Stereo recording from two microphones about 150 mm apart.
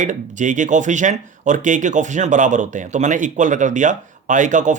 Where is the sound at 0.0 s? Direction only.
55° right (ahead or behind).